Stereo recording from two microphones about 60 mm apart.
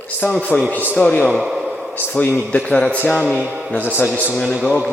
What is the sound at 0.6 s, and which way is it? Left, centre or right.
Speech, right.